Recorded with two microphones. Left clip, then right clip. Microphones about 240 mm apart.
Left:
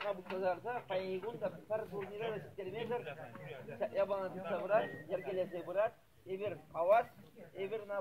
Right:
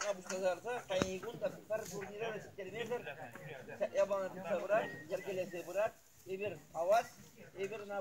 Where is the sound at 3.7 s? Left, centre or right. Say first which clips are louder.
Right 1 dB; right.